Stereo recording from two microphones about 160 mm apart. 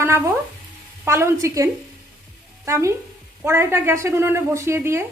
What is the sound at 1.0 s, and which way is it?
A woman's voice, 15° right (ahead or behind).